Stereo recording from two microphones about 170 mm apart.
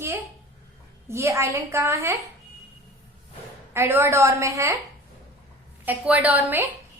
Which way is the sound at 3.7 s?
15° right (ahead or behind).